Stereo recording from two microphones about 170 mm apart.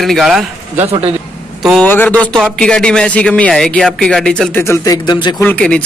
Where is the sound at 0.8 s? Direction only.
35° right (ahead or behind).